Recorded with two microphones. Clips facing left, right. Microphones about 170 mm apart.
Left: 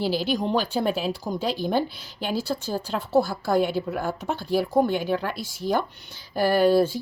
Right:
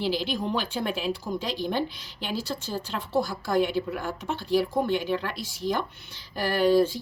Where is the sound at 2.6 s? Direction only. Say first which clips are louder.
Left 4 dB; 45° left (ahead or behind).